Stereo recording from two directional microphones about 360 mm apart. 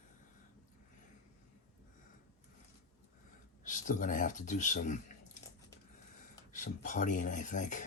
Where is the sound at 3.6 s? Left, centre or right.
Left.